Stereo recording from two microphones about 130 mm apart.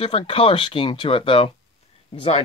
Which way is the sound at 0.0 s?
45° left (ahead or behind).